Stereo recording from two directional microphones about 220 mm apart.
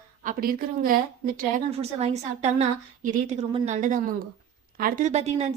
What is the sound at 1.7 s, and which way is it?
Speech, 30° right (ahead or behind).